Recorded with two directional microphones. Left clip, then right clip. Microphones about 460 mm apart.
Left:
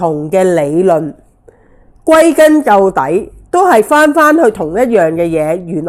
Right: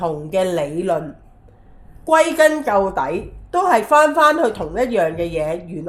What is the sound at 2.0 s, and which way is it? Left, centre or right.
A woman's voice, left.